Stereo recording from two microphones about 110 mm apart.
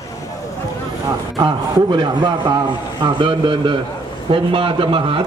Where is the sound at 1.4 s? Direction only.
45° right (ahead or behind).